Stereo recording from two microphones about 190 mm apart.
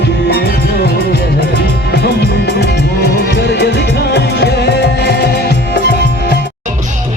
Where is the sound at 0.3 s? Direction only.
55° left (ahead or behind).